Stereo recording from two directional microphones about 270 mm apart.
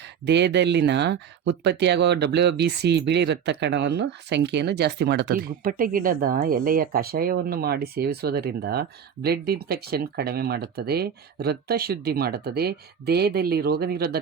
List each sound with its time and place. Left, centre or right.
0.0 s speech: right